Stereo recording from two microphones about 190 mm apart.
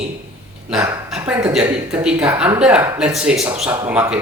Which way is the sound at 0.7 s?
5° right (ahead or behind).